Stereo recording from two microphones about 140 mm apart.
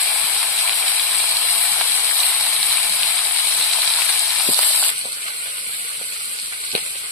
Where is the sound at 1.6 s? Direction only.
10° left (ahead or behind).